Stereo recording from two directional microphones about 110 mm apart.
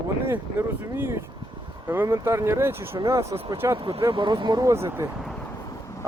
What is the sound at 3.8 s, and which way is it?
Speech, 55° right (ahead or behind).